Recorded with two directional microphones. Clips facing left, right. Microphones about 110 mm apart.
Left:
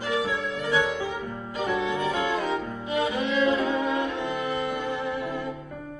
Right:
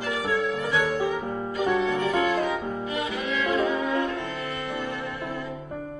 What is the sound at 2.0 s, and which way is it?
Music, 20° left (ahead or behind).